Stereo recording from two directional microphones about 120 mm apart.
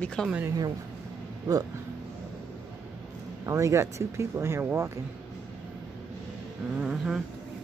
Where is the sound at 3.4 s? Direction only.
25° right (ahead or behind).